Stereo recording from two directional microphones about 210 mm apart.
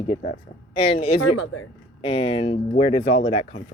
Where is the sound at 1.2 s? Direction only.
80° left.